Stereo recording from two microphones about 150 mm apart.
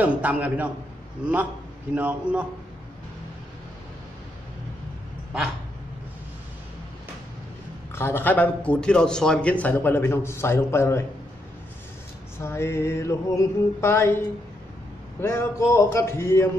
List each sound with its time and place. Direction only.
0.0 s a man's voice: 10° right (ahead or behind)
7.9 s a man's voice: 15° left (ahead or behind)
12.4 s a man's voice: 20° left (ahead or behind)
15.1 s a man's voice: 15° left (ahead or behind)